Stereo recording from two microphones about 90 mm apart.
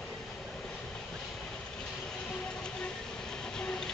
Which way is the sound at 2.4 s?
10° left (ahead or behind).